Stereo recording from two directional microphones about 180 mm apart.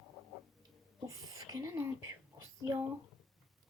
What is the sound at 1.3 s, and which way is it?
Whispering, 20° right (ahead or behind).